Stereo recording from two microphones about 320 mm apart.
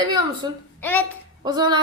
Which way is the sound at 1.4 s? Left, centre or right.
Centre.